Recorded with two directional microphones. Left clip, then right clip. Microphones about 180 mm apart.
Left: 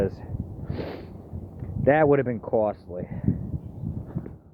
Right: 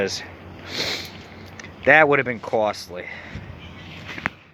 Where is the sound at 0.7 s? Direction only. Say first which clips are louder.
Right 10 dB; 15° left (ahead or behind).